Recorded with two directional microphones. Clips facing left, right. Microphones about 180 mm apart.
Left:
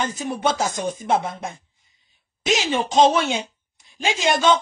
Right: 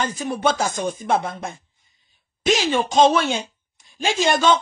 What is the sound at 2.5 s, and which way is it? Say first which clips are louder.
Speech: right 1 dB; 20° left (ahead or behind).